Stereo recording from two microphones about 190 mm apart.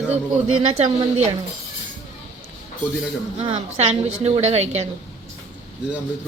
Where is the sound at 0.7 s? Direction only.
35° right (ahead or behind).